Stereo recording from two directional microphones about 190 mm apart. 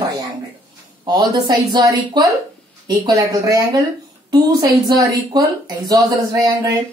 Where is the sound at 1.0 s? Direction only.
20° right (ahead or behind).